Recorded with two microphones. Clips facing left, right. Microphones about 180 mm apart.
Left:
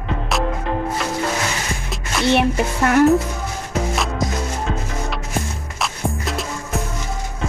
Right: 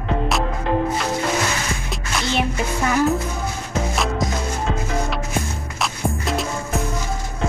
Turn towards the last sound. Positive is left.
turn(degrees=0)  # may be behind; listen again after turning